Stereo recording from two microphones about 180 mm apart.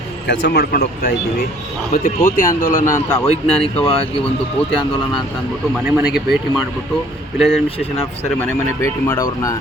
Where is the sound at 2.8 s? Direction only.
15° left (ahead or behind).